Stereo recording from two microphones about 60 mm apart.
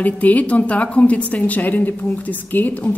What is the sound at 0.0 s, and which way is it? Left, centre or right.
A woman's voice, left.